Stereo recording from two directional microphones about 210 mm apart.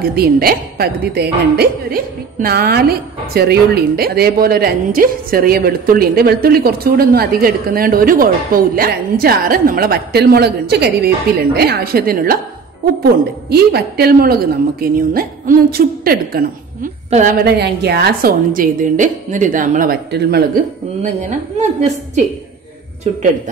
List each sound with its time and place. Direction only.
0.0 s a woman's voice: 50° right (ahead or behind)
21.0 s a woman's voice: 35° right (ahead or behind)